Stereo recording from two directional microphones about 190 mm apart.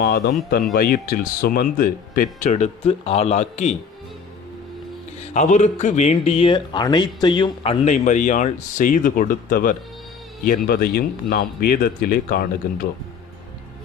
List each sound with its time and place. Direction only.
0.8 s speech: 50° left (ahead or behind)
5.3 s speech: 40° left (ahead or behind)